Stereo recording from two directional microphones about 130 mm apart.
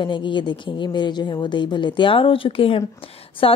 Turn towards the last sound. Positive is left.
turn(degrees=45)  # may be behind; listen again after turning